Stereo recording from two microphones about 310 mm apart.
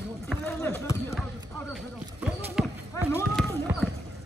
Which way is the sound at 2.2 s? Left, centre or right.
Centre.